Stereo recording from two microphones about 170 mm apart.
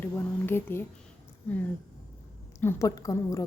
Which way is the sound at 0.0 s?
15° left (ahead or behind).